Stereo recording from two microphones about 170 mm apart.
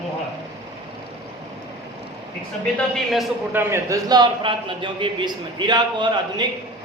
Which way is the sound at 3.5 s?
15° right (ahead or behind).